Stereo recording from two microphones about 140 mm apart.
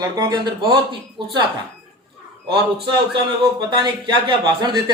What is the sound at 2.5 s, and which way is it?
A man's voice, 40° right (ahead or behind).